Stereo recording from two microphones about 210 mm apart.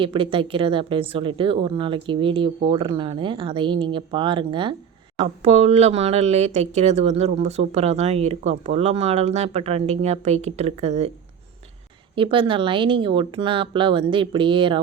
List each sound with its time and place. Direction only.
0.0 s speech: 25° right (ahead or behind)
12.1 s speech: 25° right (ahead or behind)